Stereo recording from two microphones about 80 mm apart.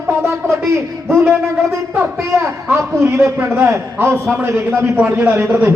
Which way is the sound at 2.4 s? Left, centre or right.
Right.